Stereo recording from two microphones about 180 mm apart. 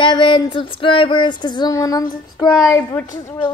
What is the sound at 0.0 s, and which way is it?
Female singing, 25° left (ahead or behind).